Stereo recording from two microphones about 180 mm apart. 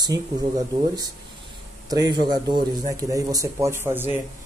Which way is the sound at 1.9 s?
20° right (ahead or behind).